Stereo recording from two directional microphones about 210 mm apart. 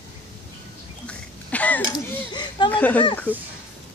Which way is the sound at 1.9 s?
20° left (ahead or behind).